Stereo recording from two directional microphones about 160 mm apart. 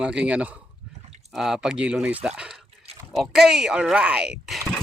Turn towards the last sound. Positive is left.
turn(degrees=0)  # may be behind; listen again after turning